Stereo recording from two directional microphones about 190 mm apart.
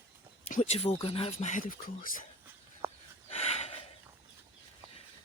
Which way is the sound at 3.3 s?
35° left (ahead or behind).